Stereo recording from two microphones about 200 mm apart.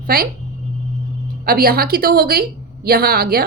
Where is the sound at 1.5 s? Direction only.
50° right (ahead or behind).